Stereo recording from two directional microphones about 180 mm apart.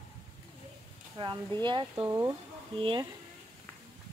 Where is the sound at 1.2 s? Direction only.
25° right (ahead or behind).